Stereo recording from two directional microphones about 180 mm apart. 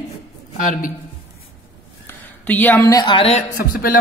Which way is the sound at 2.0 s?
10° left (ahead or behind).